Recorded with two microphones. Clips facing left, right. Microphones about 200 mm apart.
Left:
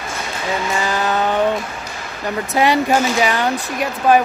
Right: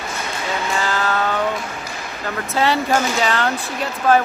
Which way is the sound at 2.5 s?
15° left (ahead or behind).